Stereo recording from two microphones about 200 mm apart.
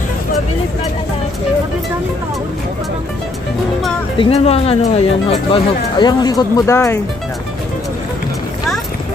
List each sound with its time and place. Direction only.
4.2 s speech: 30° left (ahead or behind); by 7.0 s 15° left (ahead or behind)